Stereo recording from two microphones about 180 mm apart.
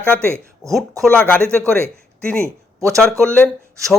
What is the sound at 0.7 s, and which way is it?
Speech, 5° left (ahead or behind).